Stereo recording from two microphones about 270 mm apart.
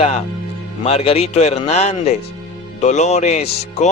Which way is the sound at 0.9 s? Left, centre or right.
Left.